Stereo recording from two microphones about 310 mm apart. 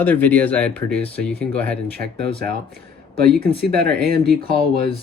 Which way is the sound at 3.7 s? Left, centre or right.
Right.